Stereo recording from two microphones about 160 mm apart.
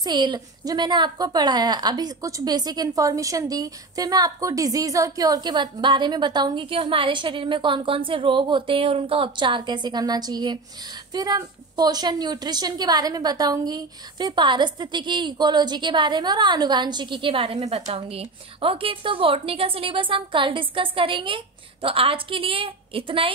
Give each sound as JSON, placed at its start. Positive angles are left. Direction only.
{"t": 0.0, "sound": "a woman's voice", "side_deg": -25}